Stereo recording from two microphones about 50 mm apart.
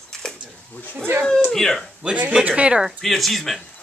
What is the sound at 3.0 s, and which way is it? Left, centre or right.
Speech, centre.